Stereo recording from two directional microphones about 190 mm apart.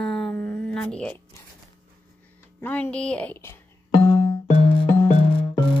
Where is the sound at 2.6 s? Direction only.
10° left (ahead or behind).